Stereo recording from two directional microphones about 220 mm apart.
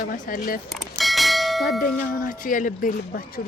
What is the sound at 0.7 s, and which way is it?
Bell, centre (ahead or behind).